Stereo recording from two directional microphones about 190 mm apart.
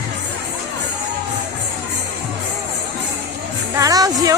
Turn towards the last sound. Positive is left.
turn(degrees=-20)  # may be behind; listen again after turning